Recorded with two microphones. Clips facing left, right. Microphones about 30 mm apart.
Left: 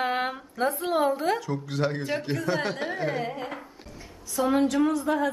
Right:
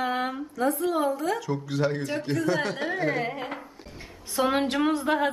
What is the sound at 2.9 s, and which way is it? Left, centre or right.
Carnatic music, centre.